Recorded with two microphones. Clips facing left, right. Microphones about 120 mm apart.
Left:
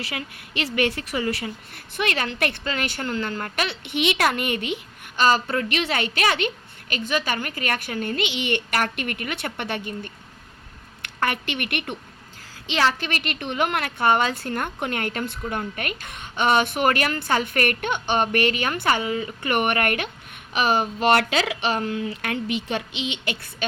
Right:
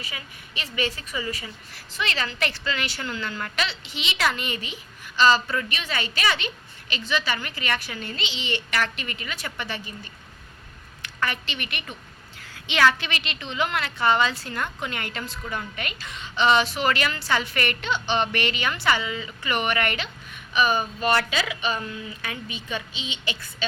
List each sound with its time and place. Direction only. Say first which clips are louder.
0.0 s a woman's voice: left 7 dB; 70° left (ahead or behind)
12.6 s a woman's voice: right 1 dB; 35° left (ahead or behind); by 23.6 s 55° left (ahead or behind)